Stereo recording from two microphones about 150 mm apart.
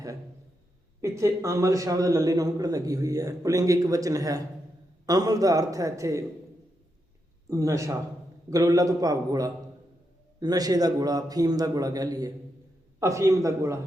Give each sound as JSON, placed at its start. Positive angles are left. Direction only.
{"t": 1.0, "sound": "a man's voice", "side_deg": -20}
{"t": 7.4, "sound": "a man's voice", "side_deg": -20}